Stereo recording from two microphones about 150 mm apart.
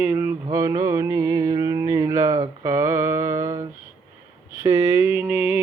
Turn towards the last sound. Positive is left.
turn(degrees=-15)  # may be behind; listen again after turning